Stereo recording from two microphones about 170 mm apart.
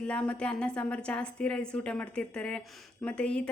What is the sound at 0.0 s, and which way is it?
A woman's voice, 5° left (ahead or behind).